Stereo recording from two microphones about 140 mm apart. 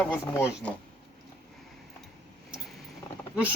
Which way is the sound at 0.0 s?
10° left (ahead or behind).